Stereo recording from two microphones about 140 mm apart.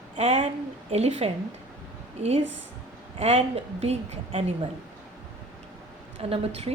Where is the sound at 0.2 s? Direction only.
50° right (ahead or behind).